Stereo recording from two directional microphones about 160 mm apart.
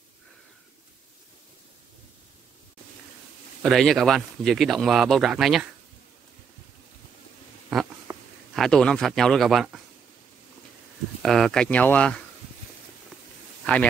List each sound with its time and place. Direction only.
3.6 s speech: centre (ahead or behind)
7.7 s a sound: 5° right (ahead or behind)
8.1 s a sound: 15° right (ahead or behind)
8.5 s speech: 5° left (ahead or behind)
11.2 s speech: centre (ahead or behind)
13.7 s speech: 10° left (ahead or behind)